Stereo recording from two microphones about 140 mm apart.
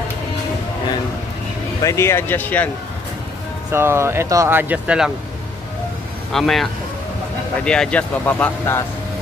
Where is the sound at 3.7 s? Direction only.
20° right (ahead or behind).